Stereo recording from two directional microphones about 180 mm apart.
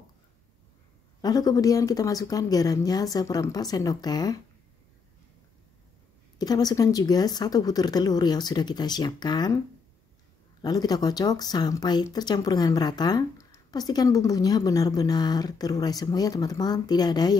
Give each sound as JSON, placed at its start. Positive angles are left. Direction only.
{"t": 1.2, "sound": "speech", "side_deg": 20}
{"t": 6.3, "sound": "speech", "side_deg": 20}
{"t": 10.6, "sound": "speech", "side_deg": 20}